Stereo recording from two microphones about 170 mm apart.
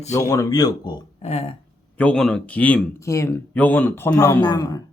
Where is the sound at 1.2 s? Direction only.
40° left (ahead or behind).